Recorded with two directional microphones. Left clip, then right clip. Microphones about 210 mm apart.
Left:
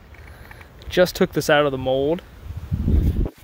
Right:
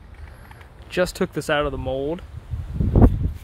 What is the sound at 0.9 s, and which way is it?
Speech, 15° left (ahead or behind).